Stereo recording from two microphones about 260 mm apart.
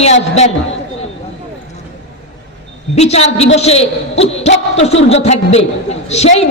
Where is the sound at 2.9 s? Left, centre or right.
Left.